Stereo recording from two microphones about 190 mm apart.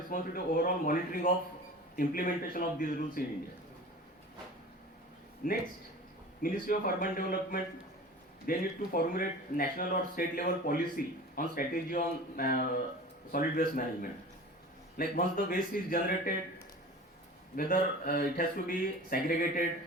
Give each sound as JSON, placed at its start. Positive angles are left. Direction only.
{"t": 0.1, "sound": "speech", "side_deg": 50}
{"t": 5.4, "sound": "speech", "side_deg": 45}
{"t": 17.6, "sound": "speech", "side_deg": 50}